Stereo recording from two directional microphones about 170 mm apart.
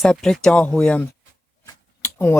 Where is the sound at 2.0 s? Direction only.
10° left (ahead or behind).